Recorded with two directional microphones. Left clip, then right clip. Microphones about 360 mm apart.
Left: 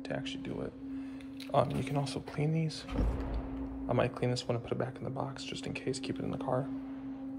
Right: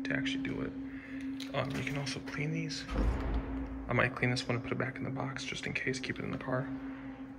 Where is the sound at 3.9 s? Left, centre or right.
Centre.